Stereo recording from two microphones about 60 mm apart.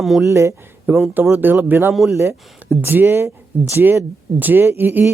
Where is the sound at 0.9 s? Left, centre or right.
Right.